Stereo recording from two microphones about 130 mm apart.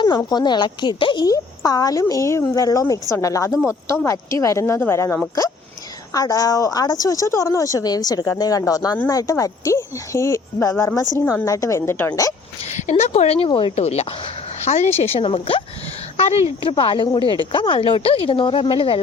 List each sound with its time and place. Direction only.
0.2 s a woman's voice: 30° left (ahead or behind)
12.7 s speech: 60° left (ahead or behind); by 15.6 s 40° left (ahead or behind)
16.1 s speech: 55° left (ahead or behind)
16.6 s speech: 40° left (ahead or behind)